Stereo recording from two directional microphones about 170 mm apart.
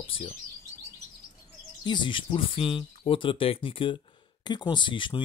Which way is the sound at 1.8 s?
25° left (ahead or behind).